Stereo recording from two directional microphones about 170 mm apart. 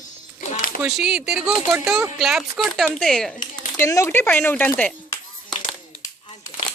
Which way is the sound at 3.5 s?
15° left (ahead or behind).